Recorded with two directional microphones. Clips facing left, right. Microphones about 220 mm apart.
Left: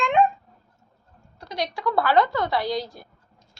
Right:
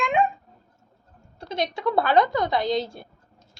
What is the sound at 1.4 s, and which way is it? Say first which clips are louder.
A woman's voice: right 2 dB; 25° right (ahead or behind).